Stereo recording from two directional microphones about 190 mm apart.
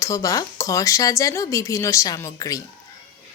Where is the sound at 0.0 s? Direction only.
15° left (ahead or behind).